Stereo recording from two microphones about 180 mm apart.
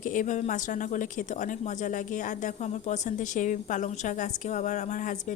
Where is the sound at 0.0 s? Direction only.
45° left (ahead or behind).